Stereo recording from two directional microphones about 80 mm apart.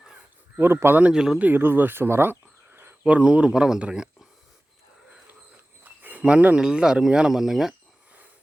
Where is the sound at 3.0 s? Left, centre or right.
Centre.